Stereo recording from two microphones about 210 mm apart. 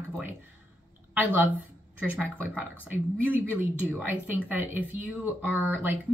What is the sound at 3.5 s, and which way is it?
Speech, 10° right (ahead or behind).